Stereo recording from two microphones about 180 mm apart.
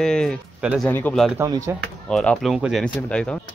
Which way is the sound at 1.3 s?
20° right (ahead or behind).